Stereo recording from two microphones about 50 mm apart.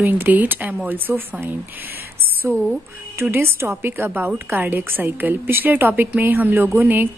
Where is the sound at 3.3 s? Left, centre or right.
Right.